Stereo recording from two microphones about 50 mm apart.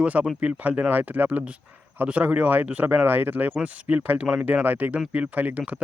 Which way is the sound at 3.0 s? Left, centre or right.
Right.